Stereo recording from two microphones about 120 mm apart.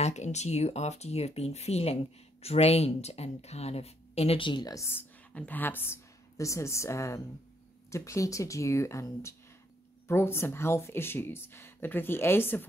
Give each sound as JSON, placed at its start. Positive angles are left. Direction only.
{"t": 0.0, "sound": "speech", "side_deg": 70}
{"t": 4.4, "sound": "a woman's voice", "side_deg": 40}
{"t": 4.7, "sound": "speech", "side_deg": 20}